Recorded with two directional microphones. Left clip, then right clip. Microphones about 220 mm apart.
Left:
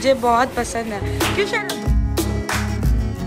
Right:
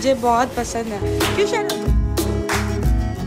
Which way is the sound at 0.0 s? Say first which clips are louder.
Left 1 dB; 15° right (ahead or behind).